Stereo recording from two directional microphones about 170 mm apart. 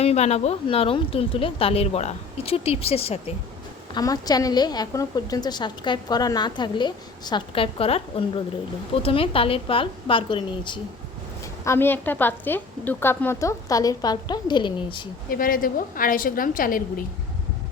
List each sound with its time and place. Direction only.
0.0 s speech: 40° left (ahead or behind)
3.9 s a woman's voice: 20° left (ahead or behind)
11.6 s a woman's voice: 15° left (ahead or behind)
15.3 s a woman's voice: 55° left (ahead or behind)